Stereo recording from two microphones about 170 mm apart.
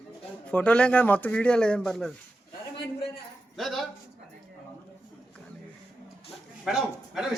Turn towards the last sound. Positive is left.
turn(degrees=-5)  # may be behind; listen again after turning